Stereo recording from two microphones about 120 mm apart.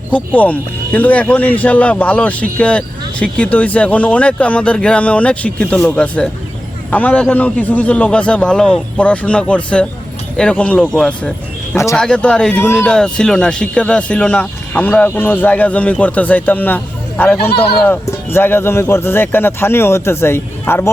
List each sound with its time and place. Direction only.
0.1 s speech: 10° left (ahead or behind)